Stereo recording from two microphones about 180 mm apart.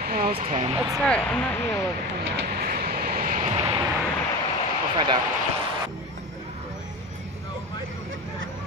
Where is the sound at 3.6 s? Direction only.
25° right (ahead or behind).